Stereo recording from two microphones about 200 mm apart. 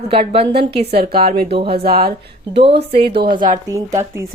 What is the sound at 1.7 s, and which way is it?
Speech, 50° right (ahead or behind).